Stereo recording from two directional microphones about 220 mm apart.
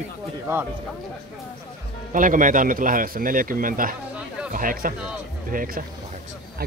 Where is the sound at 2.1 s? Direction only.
35° right (ahead or behind).